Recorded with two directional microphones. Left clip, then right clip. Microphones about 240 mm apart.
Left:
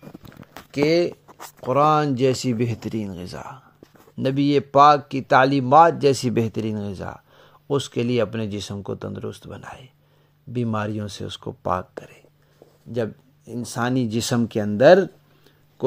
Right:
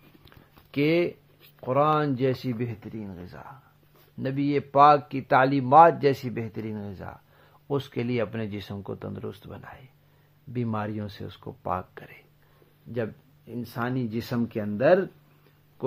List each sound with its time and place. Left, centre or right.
0.2 s a sound: centre
1.7 s speech: left
6.2 s speech: left
12.9 s speech: left